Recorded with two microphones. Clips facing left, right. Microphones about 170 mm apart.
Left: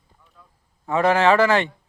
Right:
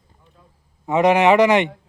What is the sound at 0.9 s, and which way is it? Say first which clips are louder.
Speech: right 3 dB; 20° right (ahead or behind).